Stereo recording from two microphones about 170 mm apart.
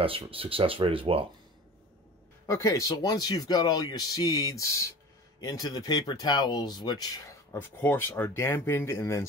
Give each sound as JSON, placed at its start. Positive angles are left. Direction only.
{"t": 0.0, "sound": "speech", "side_deg": -30}
{"t": 2.4, "sound": "speech", "side_deg": 20}
{"t": 7.5, "sound": "speech", "side_deg": 10}